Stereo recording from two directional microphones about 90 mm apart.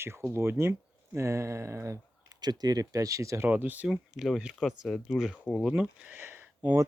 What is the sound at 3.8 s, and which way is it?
Speech, 5° right (ahead or behind).